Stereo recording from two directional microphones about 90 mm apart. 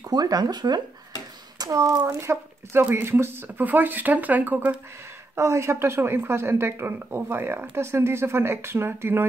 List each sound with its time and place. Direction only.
0.1 s speech: 45° right (ahead or behind)
2.0 s a woman's voice: 30° right (ahead or behind)
5.3 s a woman's voice: 30° right (ahead or behind)